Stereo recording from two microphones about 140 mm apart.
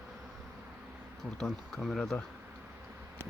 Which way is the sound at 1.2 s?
5° left (ahead or behind).